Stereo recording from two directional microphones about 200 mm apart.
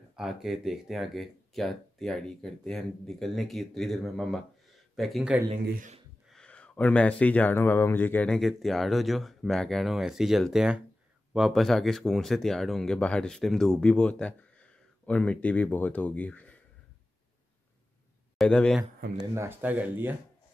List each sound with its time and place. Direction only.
0.1 s speech: centre (ahead or behind)
5.7 s speech: 40° right (ahead or behind)
6.2 s speech: 5° left (ahead or behind)
18.4 s speech: 5° left (ahead or behind)
19.3 s speech: 10° right (ahead or behind)